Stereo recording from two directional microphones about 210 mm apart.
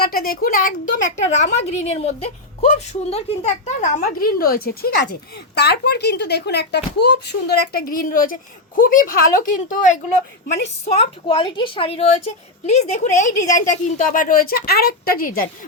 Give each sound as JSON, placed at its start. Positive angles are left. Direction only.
{"t": 0.0, "sound": "a woman's voice", "side_deg": 45}
{"t": 10.9, "sound": "a woman's voice", "side_deg": 25}